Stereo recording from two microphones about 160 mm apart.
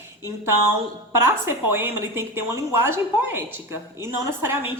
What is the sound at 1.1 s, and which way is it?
A woman's voice, 15° right (ahead or behind).